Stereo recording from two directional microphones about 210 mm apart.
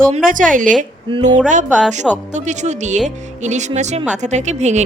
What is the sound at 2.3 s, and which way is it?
Speech, 35° right (ahead or behind).